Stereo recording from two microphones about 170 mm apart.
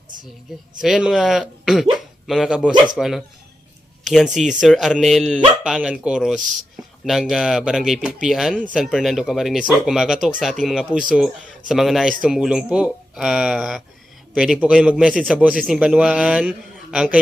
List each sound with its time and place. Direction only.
0.8 s a man's voice: 5° right (ahead or behind)
6.4 s speech: 50° right (ahead or behind)
7.0 s a man's voice: centre (ahead or behind)